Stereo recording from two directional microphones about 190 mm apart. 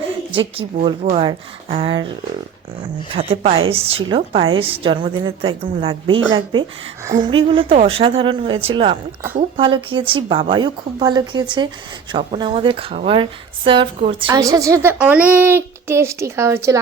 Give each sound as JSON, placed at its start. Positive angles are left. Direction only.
{"t": 0.3, "sound": "a woman's voice", "side_deg": -30}
{"t": 3.2, "sound": "a woman's voice", "side_deg": -30}